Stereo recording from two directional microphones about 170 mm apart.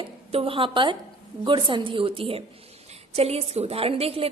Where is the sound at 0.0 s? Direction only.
35° right (ahead or behind).